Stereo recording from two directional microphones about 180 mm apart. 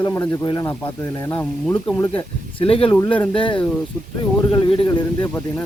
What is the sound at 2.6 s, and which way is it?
Speech, 30° left (ahead or behind).